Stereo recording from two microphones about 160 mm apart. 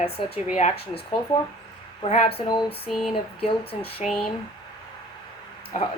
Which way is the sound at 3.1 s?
35° left (ahead or behind).